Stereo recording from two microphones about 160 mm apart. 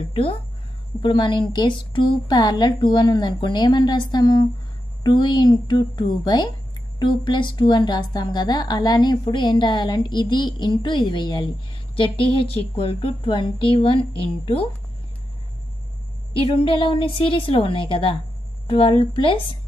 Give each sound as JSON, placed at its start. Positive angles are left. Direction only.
{"t": 0.1, "sound": "a woman's voice", "side_deg": 35}
{"t": 16.3, "sound": "a woman's voice", "side_deg": 35}